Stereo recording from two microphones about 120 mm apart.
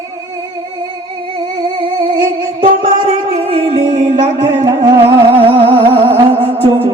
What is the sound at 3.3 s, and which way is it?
Music, 55° right (ahead or behind).